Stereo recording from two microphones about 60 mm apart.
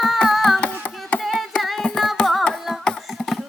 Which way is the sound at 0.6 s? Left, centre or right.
Left.